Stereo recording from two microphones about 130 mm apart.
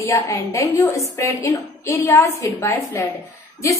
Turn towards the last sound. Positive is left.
turn(degrees=25)  # may be behind; listen again after turning